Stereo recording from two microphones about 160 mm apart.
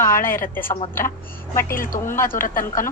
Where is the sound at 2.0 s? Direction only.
15° left (ahead or behind).